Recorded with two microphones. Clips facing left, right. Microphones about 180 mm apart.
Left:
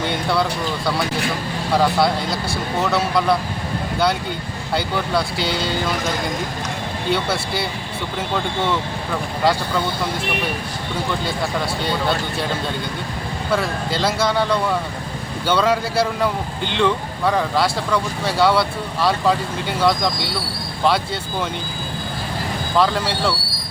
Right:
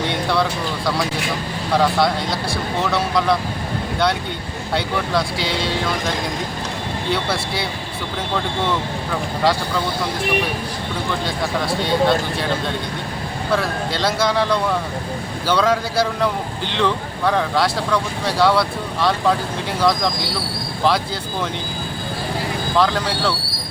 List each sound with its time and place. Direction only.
0.0 s speech: centre (ahead or behind)
1.7 s speech: centre (ahead or behind)
4.7 s speech: centre (ahead or behind)
11.3 s speech: centre (ahead or behind)
22.8 s speech: 5° left (ahead or behind)